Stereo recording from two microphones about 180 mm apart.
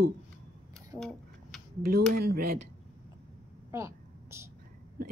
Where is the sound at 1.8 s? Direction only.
55° right (ahead or behind).